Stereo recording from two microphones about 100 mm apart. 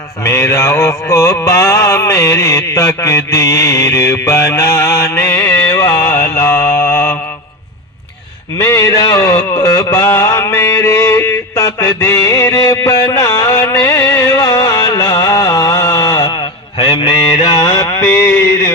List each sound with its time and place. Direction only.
0.3 s mantra: 30° left (ahead or behind)
8.6 s mantra: 30° left (ahead or behind)
9.6 s a sound: 30° left (ahead or behind)
16.8 s mantra: 40° left (ahead or behind)